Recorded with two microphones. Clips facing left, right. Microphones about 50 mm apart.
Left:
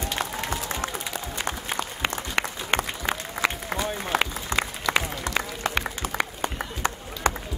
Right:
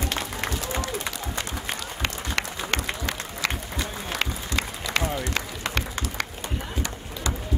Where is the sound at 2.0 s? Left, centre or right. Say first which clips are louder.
Left 1 dB; centre.